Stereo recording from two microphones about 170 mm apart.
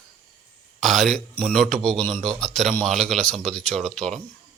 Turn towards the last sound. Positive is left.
turn(degrees=5)  # may be behind; listen again after turning